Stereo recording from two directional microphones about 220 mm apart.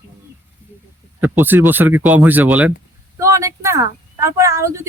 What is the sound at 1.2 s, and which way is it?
Speech, 10° right (ahead or behind).